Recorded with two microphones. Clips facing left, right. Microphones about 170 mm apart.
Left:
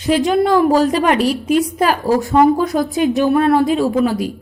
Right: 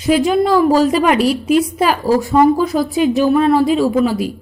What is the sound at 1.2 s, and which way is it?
Speech, 40° left (ahead or behind).